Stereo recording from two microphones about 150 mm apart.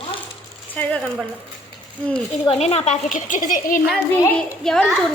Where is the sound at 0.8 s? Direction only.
5° left (ahead or behind).